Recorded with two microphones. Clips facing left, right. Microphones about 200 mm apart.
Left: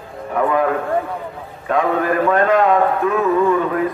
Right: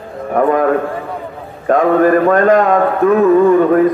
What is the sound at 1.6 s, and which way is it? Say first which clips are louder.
A man's voice: right 7 dB; 45° right (ahead or behind).